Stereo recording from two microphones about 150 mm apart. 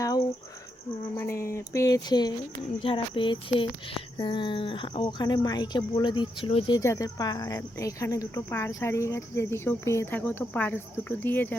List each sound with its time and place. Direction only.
1.1 s speech: 20° left (ahead or behind)
2.8 s a sound: 35° left (ahead or behind)
6.7 s speech: 20° left (ahead or behind)